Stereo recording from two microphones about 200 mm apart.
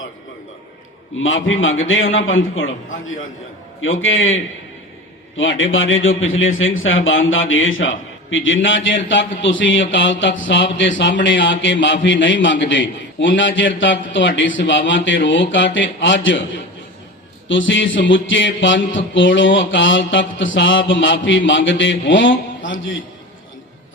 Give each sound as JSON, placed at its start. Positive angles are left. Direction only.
{"t": 1.2, "sound": "a man's voice", "side_deg": 75}
{"t": 3.8, "sound": "a man's voice", "side_deg": 75}
{"t": 5.4, "sound": "a man's voice", "side_deg": 75}
{"t": 17.5, "sound": "a man's voice", "side_deg": 70}